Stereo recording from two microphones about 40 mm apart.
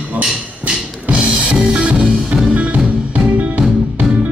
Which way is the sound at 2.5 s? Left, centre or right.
Right.